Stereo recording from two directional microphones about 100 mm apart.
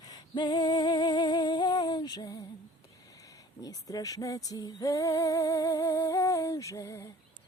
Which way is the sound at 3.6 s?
35° left (ahead or behind).